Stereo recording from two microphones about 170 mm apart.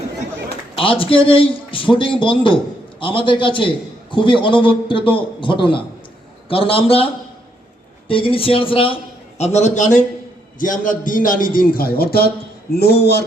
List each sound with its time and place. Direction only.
0.8 s a man's voice: 30° left (ahead or behind); by 13.2 s 70° left (ahead or behind)